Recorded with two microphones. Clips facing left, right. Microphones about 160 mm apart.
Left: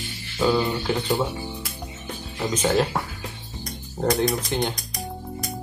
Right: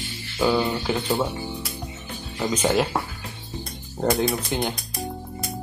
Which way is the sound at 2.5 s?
10° right (ahead or behind).